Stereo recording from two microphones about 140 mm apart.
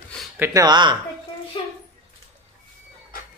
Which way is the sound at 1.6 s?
40° left (ahead or behind).